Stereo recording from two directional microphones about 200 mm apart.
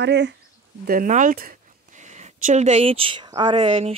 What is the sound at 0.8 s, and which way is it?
Speech, 45° right (ahead or behind).